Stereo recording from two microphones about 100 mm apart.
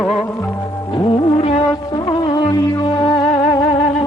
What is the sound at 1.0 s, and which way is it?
Music, 55° left (ahead or behind).